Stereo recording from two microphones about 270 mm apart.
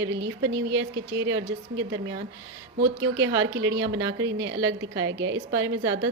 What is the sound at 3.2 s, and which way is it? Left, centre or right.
A woman's voice, right.